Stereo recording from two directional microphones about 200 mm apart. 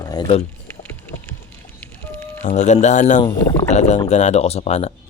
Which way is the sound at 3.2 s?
15° left (ahead or behind).